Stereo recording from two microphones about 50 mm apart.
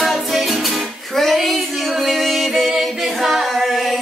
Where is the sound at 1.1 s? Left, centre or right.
Centre.